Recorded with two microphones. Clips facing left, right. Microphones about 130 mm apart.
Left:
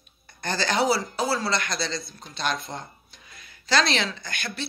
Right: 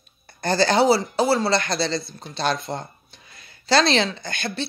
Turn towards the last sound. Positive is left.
turn(degrees=-30)  # may be behind; listen again after turning